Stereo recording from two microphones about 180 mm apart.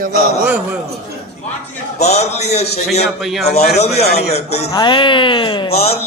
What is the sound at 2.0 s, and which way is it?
Speech, 40° left (ahead or behind).